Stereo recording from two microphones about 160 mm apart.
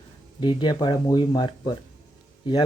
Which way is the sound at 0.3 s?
30° left (ahead or behind).